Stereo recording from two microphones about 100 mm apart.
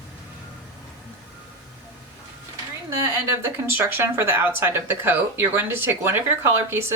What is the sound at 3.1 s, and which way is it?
Speech, 25° right (ahead or behind).